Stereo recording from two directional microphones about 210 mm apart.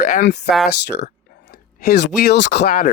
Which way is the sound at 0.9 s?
45° left (ahead or behind).